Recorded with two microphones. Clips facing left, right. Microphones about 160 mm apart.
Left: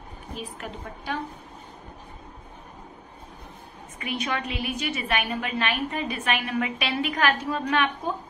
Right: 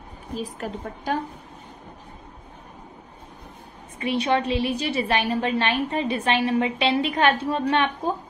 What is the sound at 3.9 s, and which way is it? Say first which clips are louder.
A woman's voice: right 7 dB; 30° right (ahead or behind).